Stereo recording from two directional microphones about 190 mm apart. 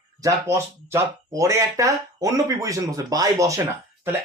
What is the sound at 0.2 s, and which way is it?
Speech, 15° right (ahead or behind).